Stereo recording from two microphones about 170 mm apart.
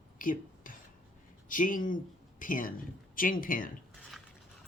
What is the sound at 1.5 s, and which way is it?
Speech, 50° left (ahead or behind).